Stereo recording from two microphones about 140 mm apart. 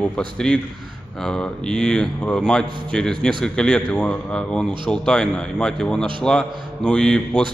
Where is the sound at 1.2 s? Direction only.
5° left (ahead or behind).